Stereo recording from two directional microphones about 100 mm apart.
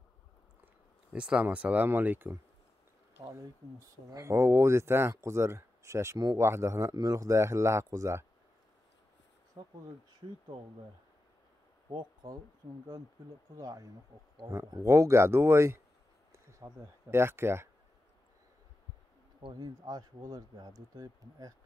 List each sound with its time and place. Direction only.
1.1 s speech: 10° right (ahead or behind)
4.1 s speech: 30° right (ahead or behind)
9.6 s speech: 45° right (ahead or behind)
11.9 s speech: 45° right (ahead or behind)
13.6 s speech: 35° right (ahead or behind)
19.6 s speech: 40° right (ahead or behind)